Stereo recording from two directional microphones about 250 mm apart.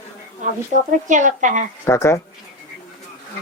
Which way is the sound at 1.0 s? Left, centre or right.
Right.